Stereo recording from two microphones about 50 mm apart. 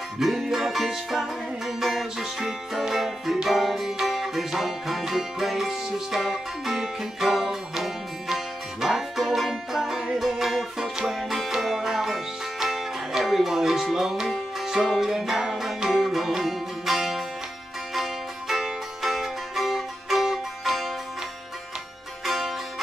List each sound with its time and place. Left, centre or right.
0.2 s music: centre
22.2 s music: centre